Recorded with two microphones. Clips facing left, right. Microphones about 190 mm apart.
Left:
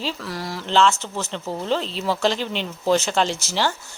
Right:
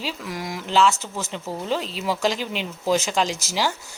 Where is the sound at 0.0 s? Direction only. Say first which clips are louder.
Left 1 dB; 20° right (ahead or behind).